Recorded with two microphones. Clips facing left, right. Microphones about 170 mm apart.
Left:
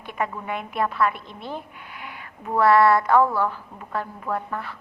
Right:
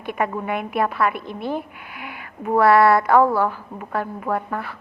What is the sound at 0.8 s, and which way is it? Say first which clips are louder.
Speech: right 1 dB; 60° right (ahead or behind).